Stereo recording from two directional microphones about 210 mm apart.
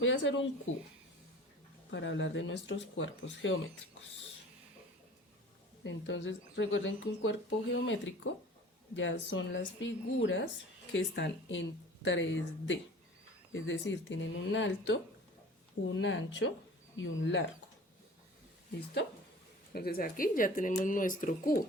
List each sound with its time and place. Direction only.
0.0 s speech: 65° left (ahead or behind)
1.9 s speech: 60° left (ahead or behind)
5.8 s speech: 60° left (ahead or behind)
19.7 s speech: 45° left (ahead or behind)